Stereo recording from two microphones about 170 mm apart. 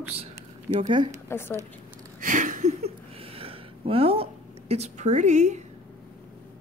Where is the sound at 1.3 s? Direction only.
15° left (ahead or behind).